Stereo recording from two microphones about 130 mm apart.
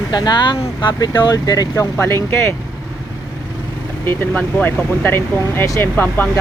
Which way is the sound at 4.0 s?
15° left (ahead or behind).